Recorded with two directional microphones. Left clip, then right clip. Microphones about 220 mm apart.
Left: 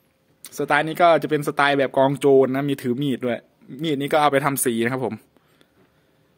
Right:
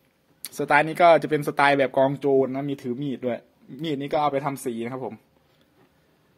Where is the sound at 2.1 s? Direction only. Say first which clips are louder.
Left 5 dB; 35° left (ahead or behind).